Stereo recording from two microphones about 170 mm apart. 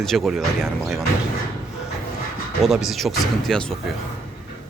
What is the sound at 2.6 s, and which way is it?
Speech, centre (ahead or behind).